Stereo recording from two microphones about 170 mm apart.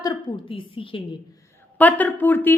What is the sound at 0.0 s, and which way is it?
A woman's voice, 25° left (ahead or behind).